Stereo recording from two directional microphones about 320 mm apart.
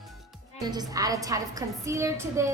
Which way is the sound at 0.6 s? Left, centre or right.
Centre.